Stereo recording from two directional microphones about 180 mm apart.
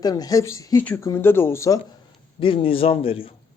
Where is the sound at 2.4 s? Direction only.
30° left (ahead or behind).